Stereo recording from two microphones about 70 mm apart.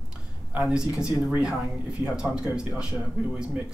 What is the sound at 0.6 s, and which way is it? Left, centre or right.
A man's voice, centre.